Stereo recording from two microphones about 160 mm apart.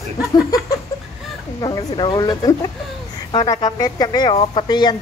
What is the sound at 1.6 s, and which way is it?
Speech, 30° left (ahead or behind).